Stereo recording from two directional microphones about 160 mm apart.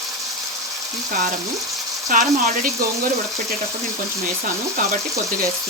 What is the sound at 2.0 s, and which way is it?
Speech, 55° right (ahead or behind).